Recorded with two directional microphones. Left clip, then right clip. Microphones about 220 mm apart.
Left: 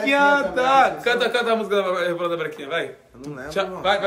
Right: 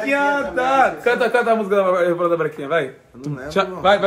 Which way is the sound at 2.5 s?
25° right (ahead or behind).